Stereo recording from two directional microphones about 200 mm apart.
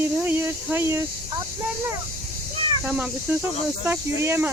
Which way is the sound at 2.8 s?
5° right (ahead or behind).